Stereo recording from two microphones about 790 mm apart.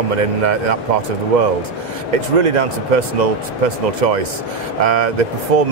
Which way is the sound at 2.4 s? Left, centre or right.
Right.